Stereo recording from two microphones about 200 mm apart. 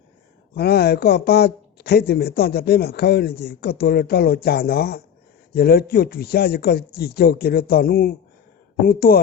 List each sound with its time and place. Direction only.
0.5 s speech: 55° left (ahead or behind)